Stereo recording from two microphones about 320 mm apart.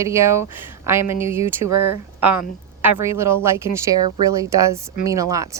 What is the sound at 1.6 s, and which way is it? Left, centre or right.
Speech, right.